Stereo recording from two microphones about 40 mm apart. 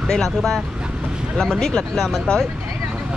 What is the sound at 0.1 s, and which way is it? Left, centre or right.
Speech, centre.